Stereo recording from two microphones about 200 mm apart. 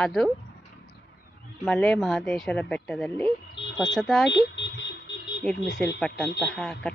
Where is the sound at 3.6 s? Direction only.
65° left (ahead or behind).